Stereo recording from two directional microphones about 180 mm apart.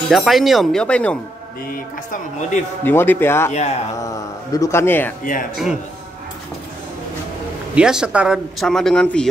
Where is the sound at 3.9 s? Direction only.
20° left (ahead or behind).